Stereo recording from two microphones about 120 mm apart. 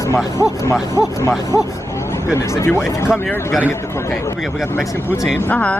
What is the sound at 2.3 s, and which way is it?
Speech, 25° left (ahead or behind).